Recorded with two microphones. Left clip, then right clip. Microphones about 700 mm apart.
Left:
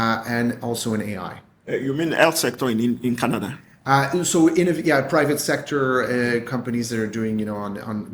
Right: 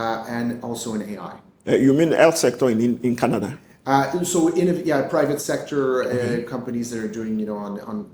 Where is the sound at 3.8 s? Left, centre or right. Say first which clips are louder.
Left 1 dB; left.